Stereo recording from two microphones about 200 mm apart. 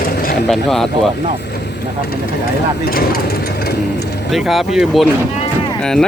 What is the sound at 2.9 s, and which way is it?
Speech, 50° left (ahead or behind).